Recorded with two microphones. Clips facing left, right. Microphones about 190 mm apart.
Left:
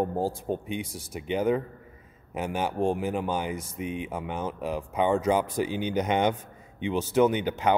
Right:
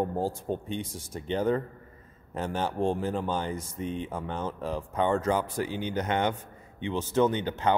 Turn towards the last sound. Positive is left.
turn(degrees=15)  # may be behind; listen again after turning